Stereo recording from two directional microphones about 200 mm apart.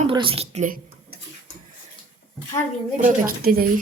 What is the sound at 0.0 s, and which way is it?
Speech, 25° right (ahead or behind).